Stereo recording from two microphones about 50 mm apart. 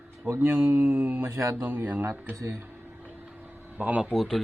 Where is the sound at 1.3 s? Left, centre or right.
Right.